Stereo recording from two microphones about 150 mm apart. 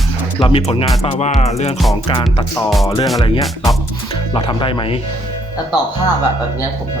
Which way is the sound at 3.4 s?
Centre (ahead or behind).